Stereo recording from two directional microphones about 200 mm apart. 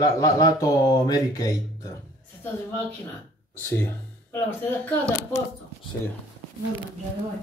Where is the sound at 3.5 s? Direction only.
10° left (ahead or behind).